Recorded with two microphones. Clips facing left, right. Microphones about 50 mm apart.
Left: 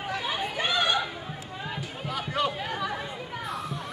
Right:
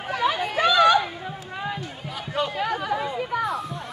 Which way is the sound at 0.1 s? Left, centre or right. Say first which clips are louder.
Right 8 dB; right.